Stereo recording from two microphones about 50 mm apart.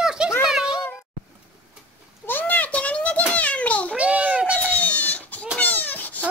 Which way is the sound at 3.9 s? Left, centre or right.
Right.